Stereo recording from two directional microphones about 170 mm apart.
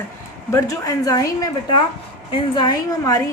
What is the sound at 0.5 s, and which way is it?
A woman's voice, 20° left (ahead or behind).